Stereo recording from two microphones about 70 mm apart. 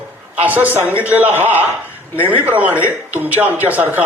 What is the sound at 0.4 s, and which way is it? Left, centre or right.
A man's voice, right.